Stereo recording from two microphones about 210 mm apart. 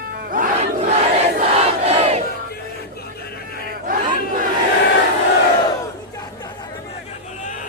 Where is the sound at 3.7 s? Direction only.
40° right (ahead or behind).